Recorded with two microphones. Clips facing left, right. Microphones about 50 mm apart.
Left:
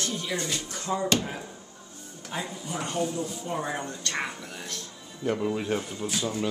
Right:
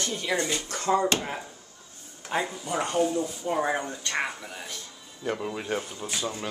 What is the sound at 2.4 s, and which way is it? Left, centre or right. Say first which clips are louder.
Speech: right 3 dB; right.